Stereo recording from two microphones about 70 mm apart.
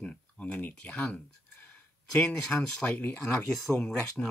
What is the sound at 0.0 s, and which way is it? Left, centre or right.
Speech, centre.